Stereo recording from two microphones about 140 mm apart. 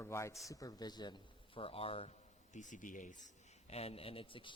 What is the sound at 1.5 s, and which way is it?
Speech, 40° left (ahead or behind).